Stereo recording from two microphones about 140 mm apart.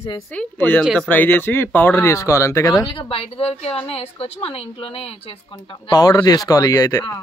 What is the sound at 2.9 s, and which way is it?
A woman's voice, 40° left (ahead or behind).